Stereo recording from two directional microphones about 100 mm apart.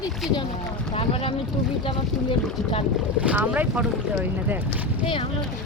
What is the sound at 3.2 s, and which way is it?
Speech, 15° right (ahead or behind).